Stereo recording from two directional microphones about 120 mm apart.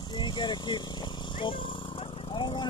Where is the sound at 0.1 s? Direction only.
40° left (ahead or behind).